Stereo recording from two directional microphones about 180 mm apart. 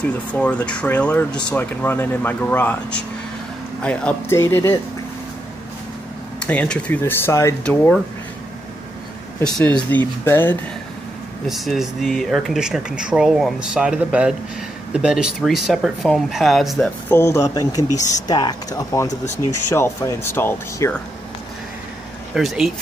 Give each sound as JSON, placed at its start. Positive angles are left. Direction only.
{"t": 0.0, "sound": "speech", "side_deg": 5}
{"t": 6.4, "sound": "speech", "side_deg": 5}
{"t": 9.4, "sound": "speech", "side_deg": 5}
{"t": 11.4, "sound": "speech", "side_deg": 0}
{"t": 17.1, "sound": "speech", "side_deg": 15}
{"t": 22.3, "sound": "speech", "side_deg": 0}